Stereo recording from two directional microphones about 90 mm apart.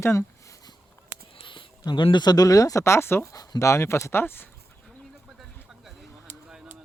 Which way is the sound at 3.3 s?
45° left (ahead or behind).